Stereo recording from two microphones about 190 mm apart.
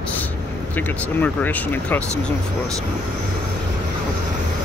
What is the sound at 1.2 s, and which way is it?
Speech, 10° left (ahead or behind).